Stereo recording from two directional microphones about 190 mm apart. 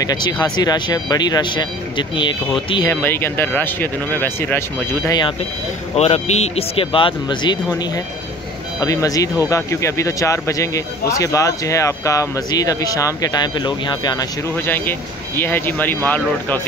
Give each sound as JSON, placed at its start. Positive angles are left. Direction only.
{"t": 0.0, "sound": "speech", "side_deg": 20}
{"t": 2.9, "sound": "speech", "side_deg": 10}
{"t": 5.9, "sound": "speech", "side_deg": 35}
{"t": 14.7, "sound": "speech", "side_deg": 10}